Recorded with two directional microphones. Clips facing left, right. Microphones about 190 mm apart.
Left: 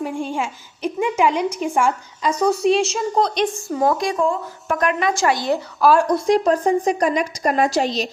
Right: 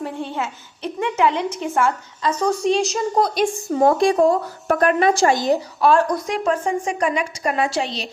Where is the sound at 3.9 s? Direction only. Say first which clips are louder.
Right 5 dB; 35° right (ahead or behind).